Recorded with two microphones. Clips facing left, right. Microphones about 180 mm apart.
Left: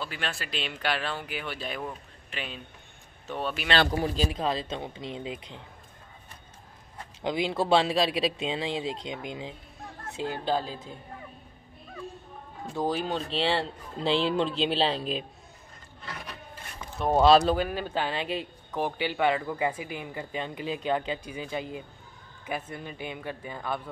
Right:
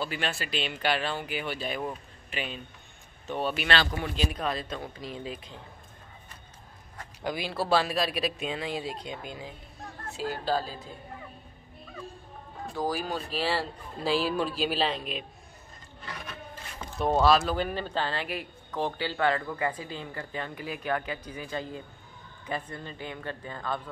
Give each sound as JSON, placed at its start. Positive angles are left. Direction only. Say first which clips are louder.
{"t": 0.0, "sound": "speech", "louder": "right 3 dB", "side_deg": 0}
{"t": 3.9, "sound": "speech", "louder": "left 3 dB", "side_deg": 35}
{"t": 4.4, "sound": "speech", "louder": "left 2 dB", "side_deg": 25}
{"t": 7.2, "sound": "speech", "louder": "left 4 dB", "side_deg": 20}
{"t": 12.7, "sound": "speech", "louder": "left 2 dB", "side_deg": 25}
{"t": 17.0, "sound": "speech", "louder": "left 3 dB", "side_deg": 0}